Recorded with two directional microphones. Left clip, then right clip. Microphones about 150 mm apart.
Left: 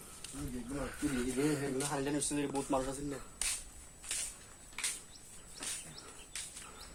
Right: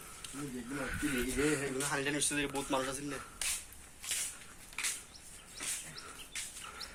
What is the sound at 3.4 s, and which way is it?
Whip, centre (ahead or behind).